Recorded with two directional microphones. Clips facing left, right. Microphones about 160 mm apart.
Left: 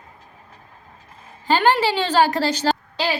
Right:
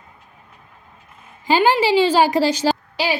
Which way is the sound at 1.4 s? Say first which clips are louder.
Right 2 dB; 10° right (ahead or behind).